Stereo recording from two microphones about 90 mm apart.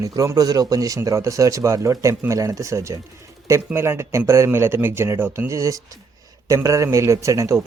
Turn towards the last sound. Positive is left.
turn(degrees=-35)  # may be behind; listen again after turning